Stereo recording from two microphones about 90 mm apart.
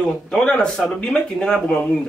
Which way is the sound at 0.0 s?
10° left (ahead or behind).